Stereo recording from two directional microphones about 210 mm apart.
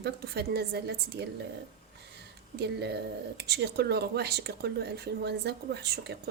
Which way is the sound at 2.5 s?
50° right (ahead or behind).